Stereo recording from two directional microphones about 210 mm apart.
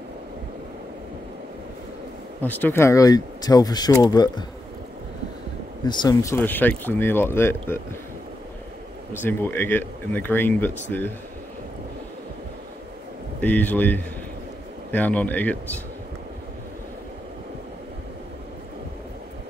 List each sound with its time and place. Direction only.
2.4 s speech: 10° left (ahead or behind)
5.9 s speech: 20° left (ahead or behind)
9.2 s speech: 10° left (ahead or behind)
13.4 s speech: 10° left (ahead or behind)